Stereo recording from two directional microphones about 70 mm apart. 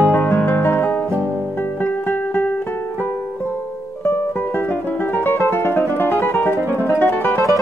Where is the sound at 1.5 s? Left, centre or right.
Left.